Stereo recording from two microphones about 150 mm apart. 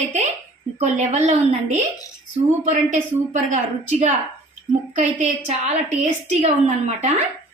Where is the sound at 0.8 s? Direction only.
50° right (ahead or behind).